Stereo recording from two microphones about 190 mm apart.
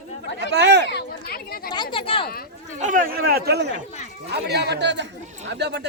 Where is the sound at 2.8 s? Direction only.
45° right (ahead or behind); by 5.1 s 65° right (ahead or behind).